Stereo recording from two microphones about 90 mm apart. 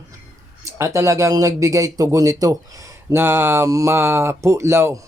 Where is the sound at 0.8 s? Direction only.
35° right (ahead or behind).